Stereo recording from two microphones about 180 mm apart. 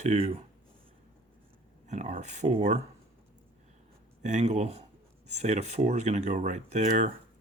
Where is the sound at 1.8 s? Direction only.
40° right (ahead or behind).